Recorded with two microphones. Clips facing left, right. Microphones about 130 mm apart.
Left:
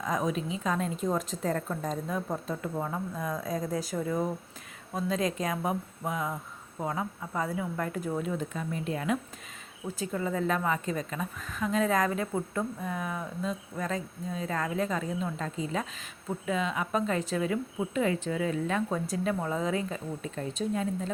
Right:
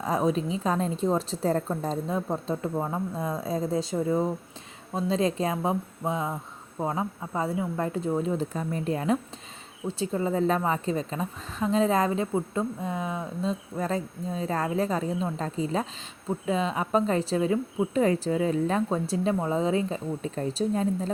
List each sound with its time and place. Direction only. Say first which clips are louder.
0.0 s a woman's voice: right 5 dB; 30° right (ahead or behind)